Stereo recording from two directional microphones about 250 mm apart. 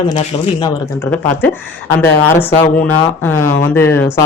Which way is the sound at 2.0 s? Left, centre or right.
Centre.